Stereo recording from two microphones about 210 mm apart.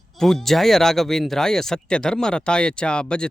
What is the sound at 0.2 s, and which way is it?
Speech, centre (ahead or behind).